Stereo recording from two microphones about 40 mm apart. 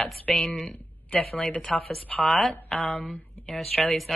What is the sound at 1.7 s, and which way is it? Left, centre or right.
Speech, left.